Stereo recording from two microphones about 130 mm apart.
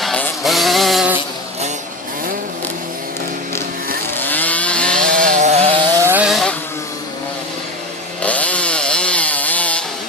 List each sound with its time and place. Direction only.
0.0 s a sound: 5° left (ahead or behind)
4.1 s chainsaw: 15° left (ahead or behind)
5.1 s a sound: 80° right; by 5.7 s 60° right (ahead or behind)
6.0 s vehicle: 15° right (ahead or behind)
6.2 s vehicle: centre (ahead or behind)
8.2 s chainsaw: 10° left (ahead or behind)